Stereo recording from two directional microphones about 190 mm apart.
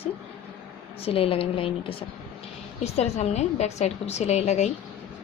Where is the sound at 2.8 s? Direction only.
35° left (ahead or behind).